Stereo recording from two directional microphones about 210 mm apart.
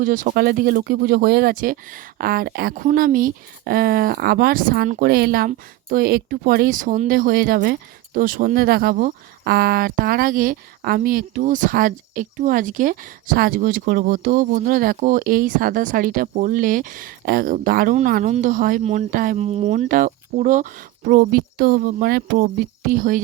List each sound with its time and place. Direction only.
0.0 s speech: 40° right (ahead or behind)